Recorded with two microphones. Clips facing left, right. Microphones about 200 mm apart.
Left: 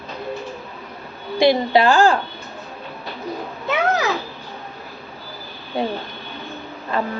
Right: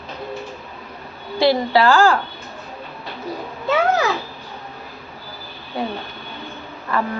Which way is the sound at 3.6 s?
20° left (ahead or behind).